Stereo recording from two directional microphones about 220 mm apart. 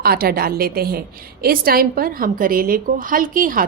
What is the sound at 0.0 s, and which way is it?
A woman's voice, 45° right (ahead or behind).